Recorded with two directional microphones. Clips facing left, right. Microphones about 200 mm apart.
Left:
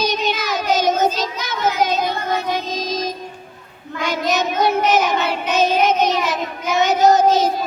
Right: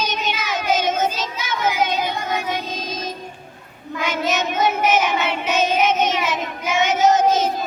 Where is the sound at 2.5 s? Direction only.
35° left (ahead or behind).